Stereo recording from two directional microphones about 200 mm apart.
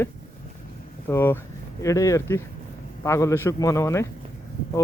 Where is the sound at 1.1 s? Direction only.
10° left (ahead or behind).